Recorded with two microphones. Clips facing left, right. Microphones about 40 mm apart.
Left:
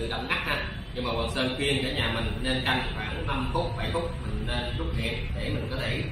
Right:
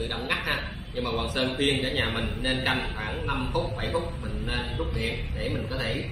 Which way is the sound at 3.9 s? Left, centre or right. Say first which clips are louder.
Right 1 dB; left.